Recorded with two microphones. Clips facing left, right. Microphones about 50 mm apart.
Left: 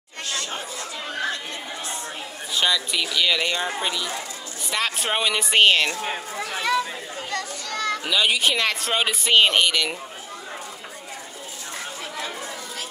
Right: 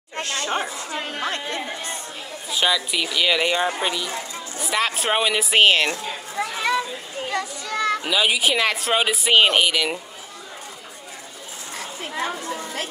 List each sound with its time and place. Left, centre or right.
0.2 s chatter: right
2.5 s a child's voice: centre
12.2 s chatter: right